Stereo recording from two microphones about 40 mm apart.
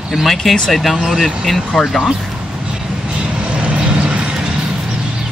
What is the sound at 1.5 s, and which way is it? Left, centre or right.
Speech, centre.